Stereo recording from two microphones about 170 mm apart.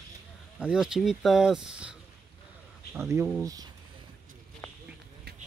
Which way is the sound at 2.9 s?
15° right (ahead or behind).